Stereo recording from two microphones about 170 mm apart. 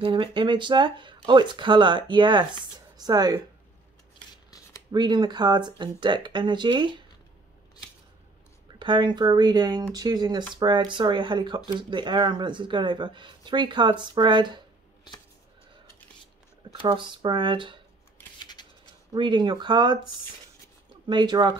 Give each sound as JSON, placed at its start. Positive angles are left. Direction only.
{"t": 0.0, "sound": "speech", "side_deg": -30}
{"t": 4.9, "sound": "speech", "side_deg": -25}
{"t": 8.7, "sound": "speech", "side_deg": -25}
{"t": 15.1, "sound": "a sound", "side_deg": 25}
{"t": 16.8, "sound": "speech", "side_deg": -25}
{"t": 18.4, "sound": "shuffling cards", "side_deg": 25}
{"t": 19.1, "sound": "speech", "side_deg": -25}
{"t": 21.1, "sound": "speech", "side_deg": -25}